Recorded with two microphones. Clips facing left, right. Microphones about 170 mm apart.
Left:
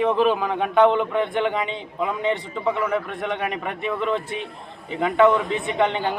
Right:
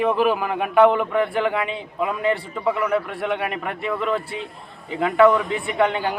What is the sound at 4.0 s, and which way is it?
A man's voice, 25° left (ahead or behind).